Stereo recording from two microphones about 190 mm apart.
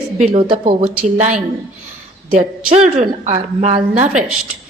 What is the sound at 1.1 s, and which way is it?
Speech, 40° right (ahead or behind).